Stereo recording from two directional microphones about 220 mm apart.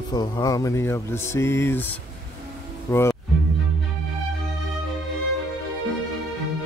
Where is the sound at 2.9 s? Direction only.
10° left (ahead or behind).